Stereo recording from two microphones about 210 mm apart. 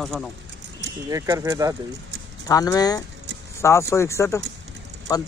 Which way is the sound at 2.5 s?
15° left (ahead or behind).